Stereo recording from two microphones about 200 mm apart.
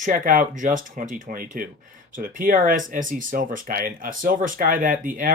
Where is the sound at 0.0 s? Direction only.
45° right (ahead or behind).